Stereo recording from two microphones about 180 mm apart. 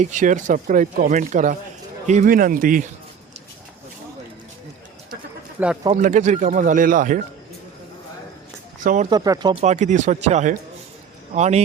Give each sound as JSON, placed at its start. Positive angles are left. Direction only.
{"t": 0.0, "sound": "speech", "side_deg": -45}
{"t": 5.6, "sound": "speech", "side_deg": -10}
{"t": 6.0, "sound": "speech", "side_deg": -40}
{"t": 8.8, "sound": "speech", "side_deg": -45}
{"t": 9.0, "sound": "speech", "side_deg": -20}
{"t": 9.6, "sound": "speech", "side_deg": -40}